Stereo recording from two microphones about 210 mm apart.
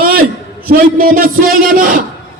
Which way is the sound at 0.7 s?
40° right (ahead or behind).